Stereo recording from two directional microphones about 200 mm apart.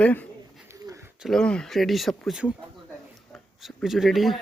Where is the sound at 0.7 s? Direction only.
15° right (ahead or behind).